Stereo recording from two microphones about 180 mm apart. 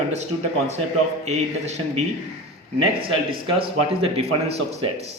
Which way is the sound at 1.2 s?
40° right (ahead or behind).